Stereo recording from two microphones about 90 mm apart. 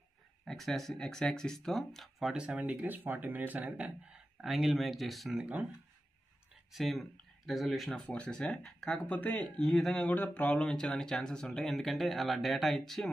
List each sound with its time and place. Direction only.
0.5 s speech: 5° left (ahead or behind)
2.3 s speech: 10° right (ahead or behind)
4.4 s speech: 5° right (ahead or behind)
5.3 s speech: 10° right (ahead or behind)
6.7 s speech: centre (ahead or behind)
8.0 s speech: 15° left (ahead or behind)
9.0 s speech: 20° left (ahead or behind)
9.6 s speech: 5° left (ahead or behind)